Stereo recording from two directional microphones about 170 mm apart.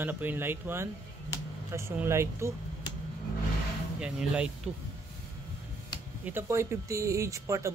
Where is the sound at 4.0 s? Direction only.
5° right (ahead or behind).